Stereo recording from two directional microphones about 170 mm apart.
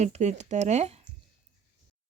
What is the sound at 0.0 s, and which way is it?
Speech, 40° right (ahead or behind).